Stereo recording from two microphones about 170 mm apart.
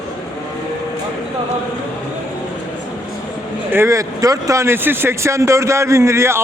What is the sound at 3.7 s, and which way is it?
Speech, 15° right (ahead or behind).